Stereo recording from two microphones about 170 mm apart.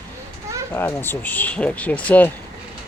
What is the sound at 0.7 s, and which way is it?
Speech, 15° left (ahead or behind).